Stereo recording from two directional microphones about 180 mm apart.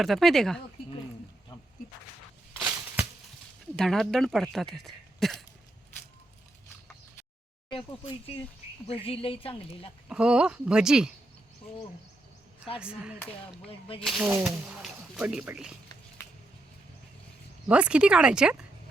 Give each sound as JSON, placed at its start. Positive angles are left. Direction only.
{"t": 0.0, "sound": "speech", "side_deg": 0}
{"t": 3.8, "sound": "speech", "side_deg": 0}
{"t": 7.7, "sound": "a woman's voice", "side_deg": 30}
{"t": 10.1, "sound": "speech", "side_deg": -5}
{"t": 12.8, "sound": "speech", "side_deg": -5}
{"t": 17.7, "sound": "speech", "side_deg": -5}